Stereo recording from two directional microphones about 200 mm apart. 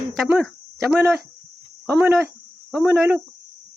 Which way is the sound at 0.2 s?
Centre (ahead or behind).